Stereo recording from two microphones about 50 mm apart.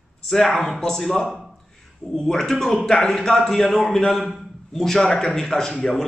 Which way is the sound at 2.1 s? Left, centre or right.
Centre.